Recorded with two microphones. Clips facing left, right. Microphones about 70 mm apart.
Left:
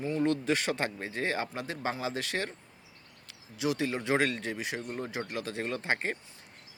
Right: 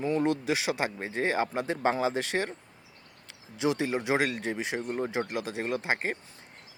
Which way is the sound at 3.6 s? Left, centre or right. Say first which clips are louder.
Right 3 dB; right.